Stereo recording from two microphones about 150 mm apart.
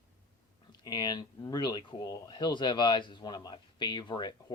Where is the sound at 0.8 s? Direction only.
25° left (ahead or behind).